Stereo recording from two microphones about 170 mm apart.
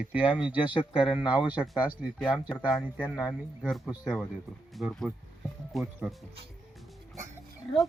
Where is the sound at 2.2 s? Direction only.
5° left (ahead or behind).